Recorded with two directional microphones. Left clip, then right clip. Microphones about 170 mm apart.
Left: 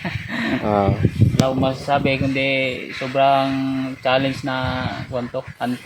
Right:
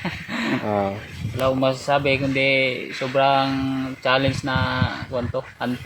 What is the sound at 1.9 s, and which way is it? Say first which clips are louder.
Speech: left 2 dB; 15° left (ahead or behind).